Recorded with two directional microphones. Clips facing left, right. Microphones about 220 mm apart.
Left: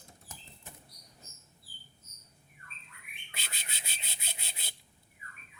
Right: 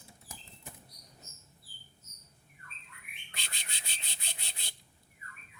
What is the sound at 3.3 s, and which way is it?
Rub, 5° left (ahead or behind).